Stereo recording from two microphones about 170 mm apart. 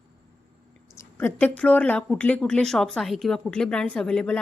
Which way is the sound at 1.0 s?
15° left (ahead or behind).